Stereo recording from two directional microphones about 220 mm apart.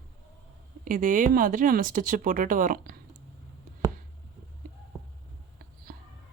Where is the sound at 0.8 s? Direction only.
40° right (ahead or behind).